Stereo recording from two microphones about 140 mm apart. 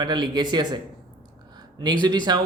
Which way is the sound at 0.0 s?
30° right (ahead or behind).